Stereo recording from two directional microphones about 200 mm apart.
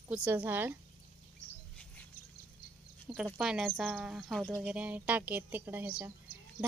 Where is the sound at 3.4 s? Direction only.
5° right (ahead or behind).